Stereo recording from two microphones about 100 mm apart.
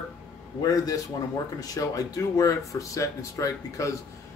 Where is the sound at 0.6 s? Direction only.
40° left (ahead or behind).